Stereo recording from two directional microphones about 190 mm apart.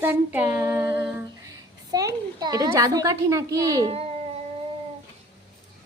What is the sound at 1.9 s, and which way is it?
A woman's voice, 20° right (ahead or behind).